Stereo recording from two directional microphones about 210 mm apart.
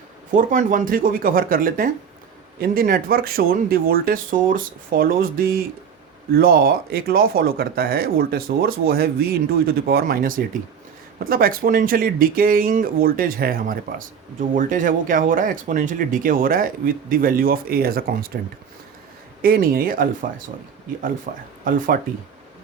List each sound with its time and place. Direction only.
0.3 s speech: 40° right (ahead or behind)
19.4 s speech: 45° right (ahead or behind)
21.3 s speech: 40° right (ahead or behind)